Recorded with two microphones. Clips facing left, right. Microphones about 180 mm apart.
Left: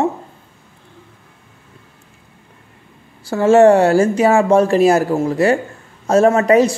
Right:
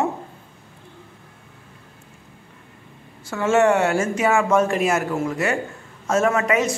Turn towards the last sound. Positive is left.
turn(degrees=35)  # may be behind; listen again after turning